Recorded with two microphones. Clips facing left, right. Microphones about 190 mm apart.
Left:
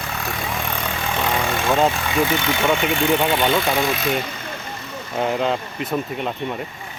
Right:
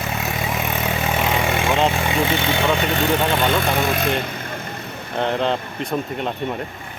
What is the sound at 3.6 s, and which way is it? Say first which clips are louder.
Speech: even; 50° right (ahead or behind).